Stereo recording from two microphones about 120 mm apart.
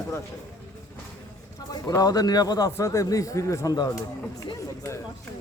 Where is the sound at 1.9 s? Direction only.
30° left (ahead or behind).